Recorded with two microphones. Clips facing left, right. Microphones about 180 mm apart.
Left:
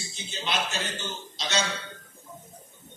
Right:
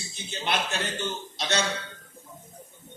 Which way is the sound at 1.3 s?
60° right (ahead or behind).